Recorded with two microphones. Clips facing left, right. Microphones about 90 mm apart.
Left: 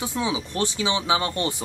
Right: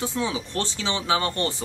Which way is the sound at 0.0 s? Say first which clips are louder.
Left 1 dB; 15° left (ahead or behind).